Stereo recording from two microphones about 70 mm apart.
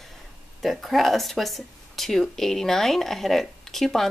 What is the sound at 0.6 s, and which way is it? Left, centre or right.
Speech, centre.